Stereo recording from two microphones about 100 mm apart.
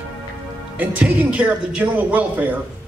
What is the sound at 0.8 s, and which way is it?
Speech, 15° right (ahead or behind).